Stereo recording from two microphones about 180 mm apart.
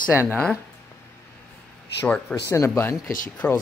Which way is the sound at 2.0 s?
5° left (ahead or behind).